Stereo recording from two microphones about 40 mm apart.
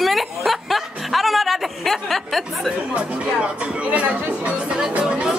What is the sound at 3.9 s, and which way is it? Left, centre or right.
Speech, right.